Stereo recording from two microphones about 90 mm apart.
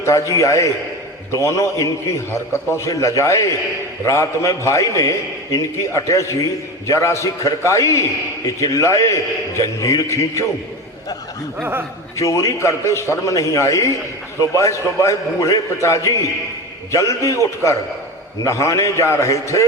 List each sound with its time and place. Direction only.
0.0 s a man's voice: 35° left (ahead or behind)
11.6 s speech: 25° right (ahead or behind)
12.1 s a man's voice: 35° left (ahead or behind)